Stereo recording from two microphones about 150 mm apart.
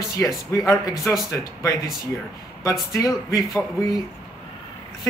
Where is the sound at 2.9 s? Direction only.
20° left (ahead or behind).